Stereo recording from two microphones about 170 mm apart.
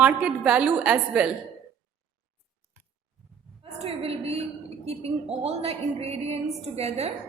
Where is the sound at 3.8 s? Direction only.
35° right (ahead or behind).